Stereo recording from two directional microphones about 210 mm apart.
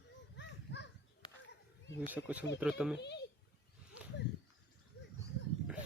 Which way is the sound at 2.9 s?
55° left (ahead or behind).